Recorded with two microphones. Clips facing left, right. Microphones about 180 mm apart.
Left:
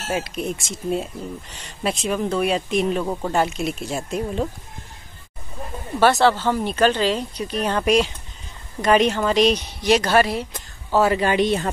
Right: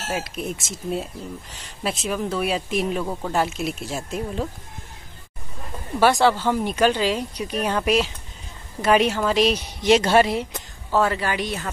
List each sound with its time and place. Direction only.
0.1 s speech: centre (ahead or behind)
3.1 s speech: 10° left (ahead or behind)
3.3 s speech: centre (ahead or behind)
5.9 s speech: 10° right (ahead or behind)
9.8 s speech: 25° right (ahead or behind)
11.1 s speech: 20° left (ahead or behind)